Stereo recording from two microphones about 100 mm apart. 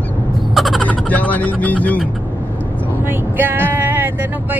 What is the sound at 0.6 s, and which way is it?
Crow, centre (ahead or behind).